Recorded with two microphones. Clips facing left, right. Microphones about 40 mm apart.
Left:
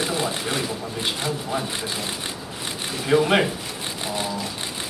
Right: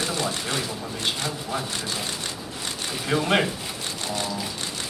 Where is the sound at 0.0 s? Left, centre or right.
Centre.